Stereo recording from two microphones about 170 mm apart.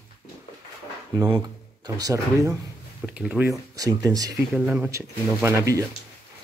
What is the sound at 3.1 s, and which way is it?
Speech, 10° right (ahead or behind).